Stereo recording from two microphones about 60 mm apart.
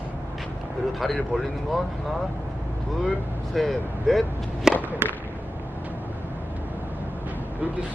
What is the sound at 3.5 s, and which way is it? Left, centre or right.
Speech, centre.